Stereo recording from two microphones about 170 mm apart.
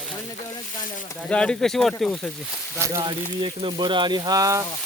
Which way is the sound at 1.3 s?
5° left (ahead or behind).